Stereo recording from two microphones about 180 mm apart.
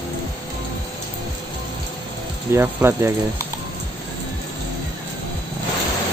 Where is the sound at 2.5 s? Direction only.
15° right (ahead or behind).